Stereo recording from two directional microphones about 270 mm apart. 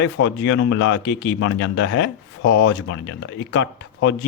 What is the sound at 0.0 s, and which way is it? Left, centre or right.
Speech, left.